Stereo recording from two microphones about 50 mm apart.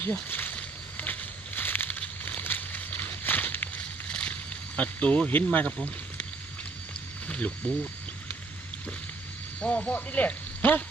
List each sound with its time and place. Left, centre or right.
0.0 s speech: left
0.5 s a sound: left
2.0 s a sound: left
3.8 s boat: left
4.8 s speech: left
7.3 s speech: left
9.6 s speech: left